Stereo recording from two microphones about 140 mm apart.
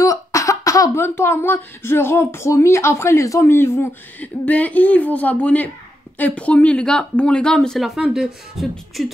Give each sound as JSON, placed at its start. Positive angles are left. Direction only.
{"t": 0.0, "sound": "speech", "side_deg": 25}